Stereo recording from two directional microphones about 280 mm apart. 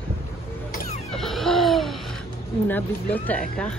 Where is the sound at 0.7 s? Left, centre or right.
Left.